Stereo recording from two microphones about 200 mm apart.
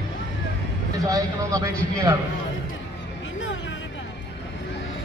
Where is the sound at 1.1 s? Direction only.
15° right (ahead or behind).